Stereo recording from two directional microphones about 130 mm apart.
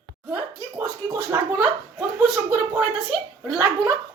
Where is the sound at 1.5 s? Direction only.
5° right (ahead or behind).